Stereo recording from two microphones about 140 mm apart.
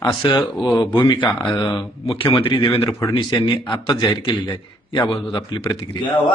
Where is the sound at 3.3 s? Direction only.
35° left (ahead or behind).